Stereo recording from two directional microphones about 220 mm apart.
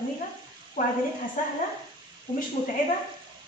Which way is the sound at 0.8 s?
35° left (ahead or behind).